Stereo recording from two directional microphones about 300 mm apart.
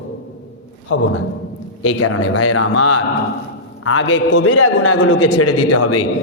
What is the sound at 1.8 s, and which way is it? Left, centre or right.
A man's voice, left.